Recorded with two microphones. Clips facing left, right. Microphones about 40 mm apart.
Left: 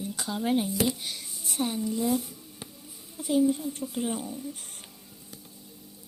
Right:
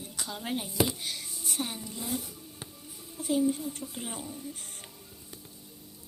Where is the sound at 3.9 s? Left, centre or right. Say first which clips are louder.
Left 8 dB; centre.